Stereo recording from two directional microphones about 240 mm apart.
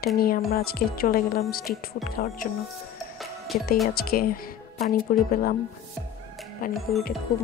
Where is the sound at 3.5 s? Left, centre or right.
Left.